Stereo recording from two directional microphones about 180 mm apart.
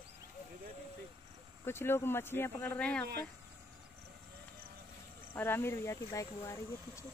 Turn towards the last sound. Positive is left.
turn(degrees=15)  # may be behind; listen again after turning